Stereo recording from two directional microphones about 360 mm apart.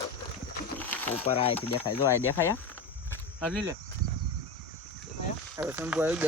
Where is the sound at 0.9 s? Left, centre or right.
Centre.